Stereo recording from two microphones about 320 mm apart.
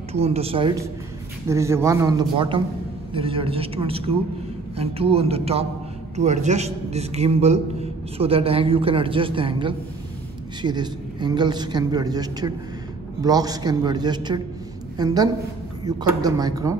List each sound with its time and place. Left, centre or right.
0.1 s a woman's voice: centre